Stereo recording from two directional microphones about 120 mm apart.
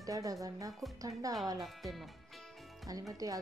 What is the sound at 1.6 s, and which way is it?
Speech, centre (ahead or behind).